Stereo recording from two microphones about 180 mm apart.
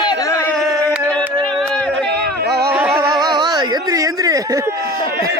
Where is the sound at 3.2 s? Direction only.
25° right (ahead or behind).